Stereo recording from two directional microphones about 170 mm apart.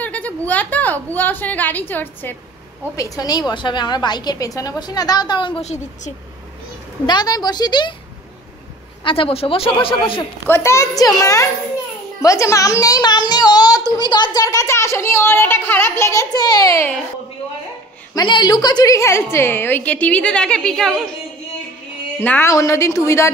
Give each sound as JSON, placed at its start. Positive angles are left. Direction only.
{"t": 0.0, "sound": "a woman's voice", "side_deg": 10}
{"t": 3.0, "sound": "a child's voice", "side_deg": 25}
{"t": 7.1, "sound": "a child's voice", "side_deg": 25}
{"t": 9.0, "sound": "a man's voice", "side_deg": 30}
{"t": 10.5, "sound": "a child's voice", "side_deg": 15}
{"t": 18.1, "sound": "a child's voice", "side_deg": 25}
{"t": 22.2, "sound": "a woman's voice", "side_deg": 10}